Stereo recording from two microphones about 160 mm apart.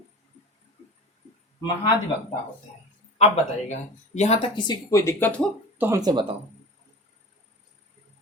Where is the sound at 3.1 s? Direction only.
40° left (ahead or behind).